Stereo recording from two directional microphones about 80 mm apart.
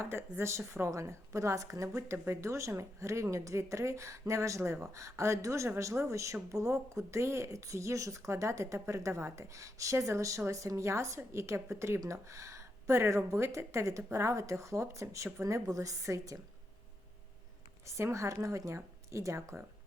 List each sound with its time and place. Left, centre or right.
0.0 s a woman's voice: right
17.9 s speech: right